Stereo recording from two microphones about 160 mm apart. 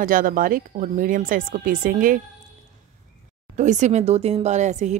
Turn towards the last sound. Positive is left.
turn(degrees=-45)  # may be behind; listen again after turning